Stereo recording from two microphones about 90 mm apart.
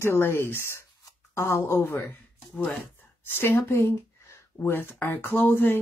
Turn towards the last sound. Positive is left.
turn(degrees=25)  # may be behind; listen again after turning